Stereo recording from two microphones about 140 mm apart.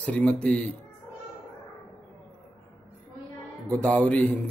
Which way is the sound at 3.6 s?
10° left (ahead or behind).